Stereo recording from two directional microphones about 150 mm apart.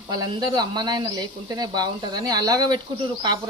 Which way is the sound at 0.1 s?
25° right (ahead or behind).